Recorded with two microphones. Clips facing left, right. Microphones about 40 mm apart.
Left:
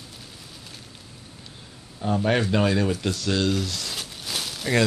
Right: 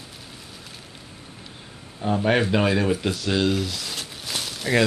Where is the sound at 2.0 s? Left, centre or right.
Centre.